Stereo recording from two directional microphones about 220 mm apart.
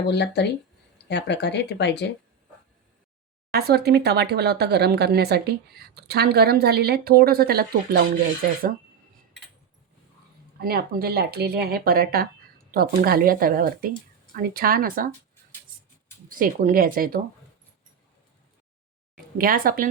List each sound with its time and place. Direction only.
0.1 s speech: 50° left (ahead or behind)
3.5 s speech: 45° right (ahead or behind)
10.6 s speech: 45° right (ahead or behind)
16.3 s speech: 40° right (ahead or behind)
19.4 s speech: 40° right (ahead or behind)